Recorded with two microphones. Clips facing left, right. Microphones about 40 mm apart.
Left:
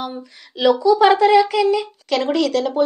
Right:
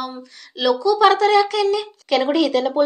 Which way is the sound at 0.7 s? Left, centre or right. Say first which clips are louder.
Left 2 dB; left.